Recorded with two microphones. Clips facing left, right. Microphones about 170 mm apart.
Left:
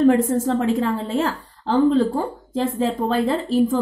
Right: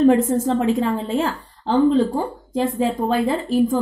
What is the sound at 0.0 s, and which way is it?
A woman's voice, 20° right (ahead or behind).